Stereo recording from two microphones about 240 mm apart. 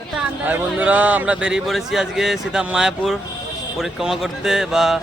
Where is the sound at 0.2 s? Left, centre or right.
Centre.